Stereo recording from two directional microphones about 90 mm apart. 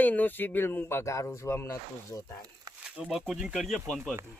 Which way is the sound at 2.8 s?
10° right (ahead or behind).